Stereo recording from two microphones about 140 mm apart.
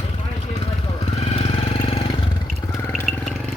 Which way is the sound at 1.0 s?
45° left (ahead or behind).